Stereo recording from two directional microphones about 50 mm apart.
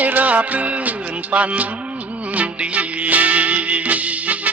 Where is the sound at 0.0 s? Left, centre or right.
Right.